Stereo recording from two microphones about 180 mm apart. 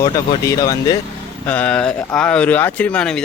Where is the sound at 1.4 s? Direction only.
10° left (ahead or behind).